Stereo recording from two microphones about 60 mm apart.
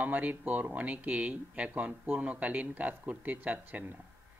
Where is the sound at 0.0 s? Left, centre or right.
Right.